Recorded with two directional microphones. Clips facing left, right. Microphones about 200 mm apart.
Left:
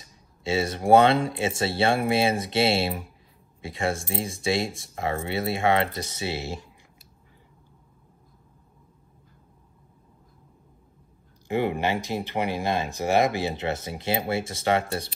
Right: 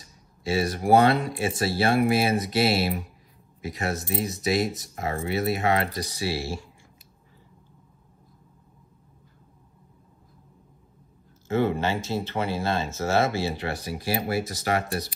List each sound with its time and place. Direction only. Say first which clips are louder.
0.4 s speech: even; 25° left (ahead or behind)
11.4 s speech: right 1 dB; 15° left (ahead or behind)